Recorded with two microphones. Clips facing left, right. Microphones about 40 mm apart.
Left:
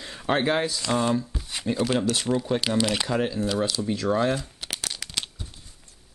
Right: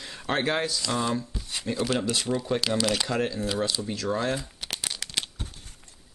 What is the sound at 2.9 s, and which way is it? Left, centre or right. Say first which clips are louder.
Speech: left 1 dB; centre.